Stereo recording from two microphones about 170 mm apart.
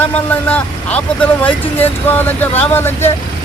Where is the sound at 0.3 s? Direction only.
10° left (ahead or behind).